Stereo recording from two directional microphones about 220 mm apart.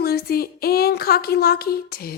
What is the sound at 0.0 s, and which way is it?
Speech, 45° left (ahead or behind).